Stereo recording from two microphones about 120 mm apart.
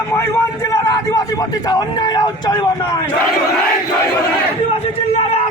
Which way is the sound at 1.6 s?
30° left (ahead or behind).